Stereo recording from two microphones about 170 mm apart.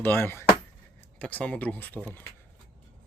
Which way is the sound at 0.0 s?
15° left (ahead or behind).